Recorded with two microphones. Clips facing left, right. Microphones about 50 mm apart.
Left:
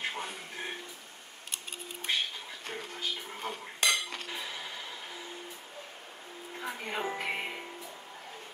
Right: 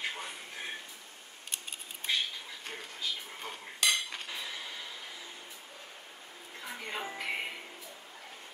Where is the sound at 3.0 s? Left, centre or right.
Left.